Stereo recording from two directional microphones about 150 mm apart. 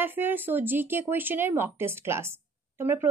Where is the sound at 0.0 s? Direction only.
15° right (ahead or behind).